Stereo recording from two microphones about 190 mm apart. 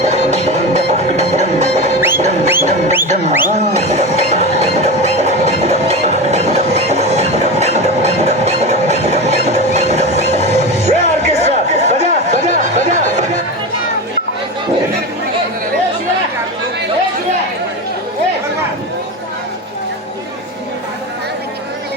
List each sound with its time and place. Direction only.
0.0 s music: 35° right (ahead or behind)